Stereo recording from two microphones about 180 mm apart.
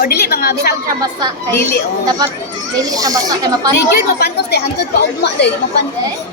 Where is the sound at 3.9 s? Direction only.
65° left (ahead or behind).